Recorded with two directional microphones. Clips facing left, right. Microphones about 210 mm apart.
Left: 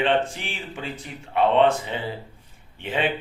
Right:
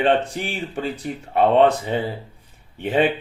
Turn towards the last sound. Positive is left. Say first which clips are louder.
# right 7 dB
turn(degrees=-40)  # may be behind; listen again after turning